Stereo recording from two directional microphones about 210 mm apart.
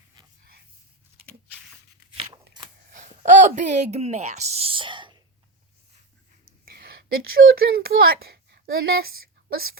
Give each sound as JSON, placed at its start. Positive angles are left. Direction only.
{"t": 0.2, "sound": "a sound", "side_deg": -20}
{"t": 2.2, "sound": "scissors", "side_deg": -20}
{"t": 2.9, "sound": "speech", "side_deg": -35}
{"t": 6.7, "sound": "speech", "side_deg": -45}